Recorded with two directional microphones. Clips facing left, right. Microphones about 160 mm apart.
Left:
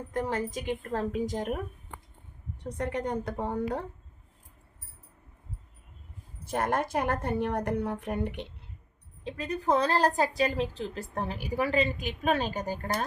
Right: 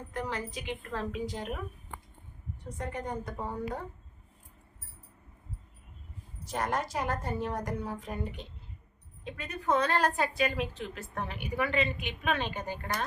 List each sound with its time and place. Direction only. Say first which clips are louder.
0.1 s a woman's voice: left 5 dB; 45° left (ahead or behind)
2.6 s a woman's voice: left 5 dB; 70° left (ahead or behind)
6.4 s a woman's voice: left 3 dB; 55° left (ahead or behind)
9.2 s a woman's voice: left 4 dB; 30° left (ahead or behind)